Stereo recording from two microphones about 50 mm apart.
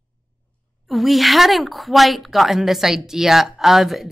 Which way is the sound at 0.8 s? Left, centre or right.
Centre.